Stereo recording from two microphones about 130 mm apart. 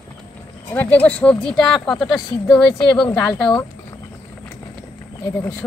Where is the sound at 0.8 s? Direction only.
10° left (ahead or behind).